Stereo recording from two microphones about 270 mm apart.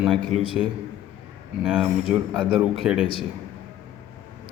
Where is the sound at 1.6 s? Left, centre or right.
Centre.